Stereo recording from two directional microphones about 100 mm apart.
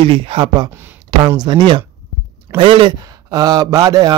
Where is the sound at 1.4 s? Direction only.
50° right (ahead or behind).